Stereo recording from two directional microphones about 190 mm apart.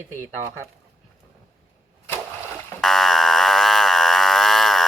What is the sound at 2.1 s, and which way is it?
Splash, 15° right (ahead or behind).